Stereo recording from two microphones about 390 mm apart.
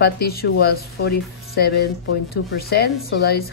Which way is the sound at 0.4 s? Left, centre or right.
Left.